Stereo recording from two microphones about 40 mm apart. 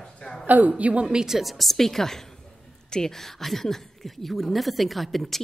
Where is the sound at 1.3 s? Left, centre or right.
Centre.